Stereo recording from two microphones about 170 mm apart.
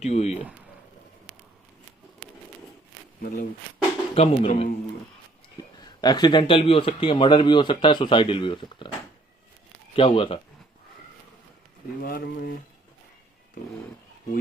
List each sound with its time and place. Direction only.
0.0 s speech: 40° left (ahead or behind)
3.2 s speech: 60° left (ahead or behind)
4.1 s speech: 35° left (ahead or behind)
5.5 s speech: 25° left (ahead or behind)
9.9 s speech: 30° left (ahead or behind)
12.0 s speech: 65° left (ahead or behind)